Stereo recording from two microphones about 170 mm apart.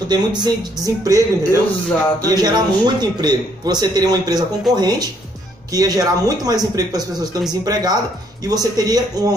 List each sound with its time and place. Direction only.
0.1 s speech: 25° right (ahead or behind)